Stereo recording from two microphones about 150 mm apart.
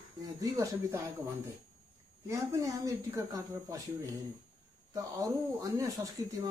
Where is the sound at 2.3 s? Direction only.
20° right (ahead or behind).